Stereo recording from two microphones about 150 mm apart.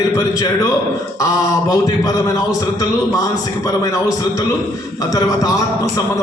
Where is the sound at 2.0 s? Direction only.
25° left (ahead or behind).